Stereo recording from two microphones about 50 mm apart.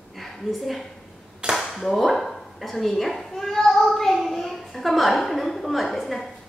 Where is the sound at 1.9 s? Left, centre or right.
Centre.